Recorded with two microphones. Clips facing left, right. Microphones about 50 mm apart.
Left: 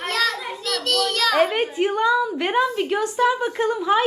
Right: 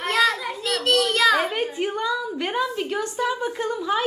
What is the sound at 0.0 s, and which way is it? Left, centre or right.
Child singing, right.